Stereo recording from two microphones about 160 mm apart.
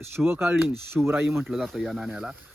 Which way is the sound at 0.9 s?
5° right (ahead or behind).